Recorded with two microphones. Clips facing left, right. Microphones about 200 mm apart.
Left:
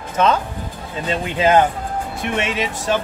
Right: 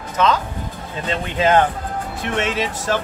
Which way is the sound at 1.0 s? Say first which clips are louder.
Left 1 dB; 15° left (ahead or behind).